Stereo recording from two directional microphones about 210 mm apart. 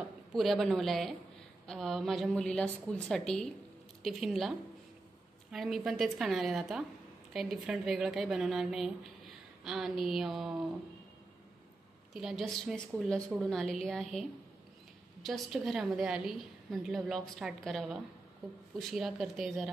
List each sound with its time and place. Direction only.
0.3 s a woman's voice: centre (ahead or behind)
12.1 s a woman's voice: centre (ahead or behind)
15.2 s a woman's voice: centre (ahead or behind)